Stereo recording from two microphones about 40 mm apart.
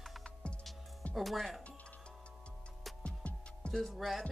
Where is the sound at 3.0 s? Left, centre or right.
Left.